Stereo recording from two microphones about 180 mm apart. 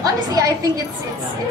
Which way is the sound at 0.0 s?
20° right (ahead or behind).